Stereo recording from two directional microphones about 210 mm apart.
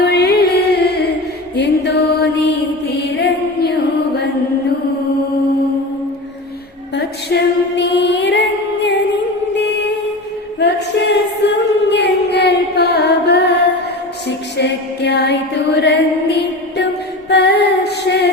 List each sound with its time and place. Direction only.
0.0 s music: 50° left (ahead or behind)
6.9 s music: 50° left (ahead or behind)
10.6 s singing: 55° left (ahead or behind)
14.3 s music: 55° left (ahead or behind)